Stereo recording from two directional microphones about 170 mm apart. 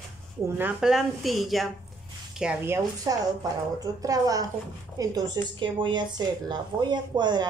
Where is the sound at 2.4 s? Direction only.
10° right (ahead or behind); by 7.4 s 25° right (ahead or behind).